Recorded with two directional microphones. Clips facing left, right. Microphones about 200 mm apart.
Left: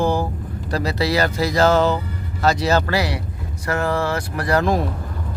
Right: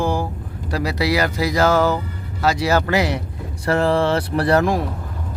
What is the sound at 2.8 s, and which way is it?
Speech, 20° right (ahead or behind).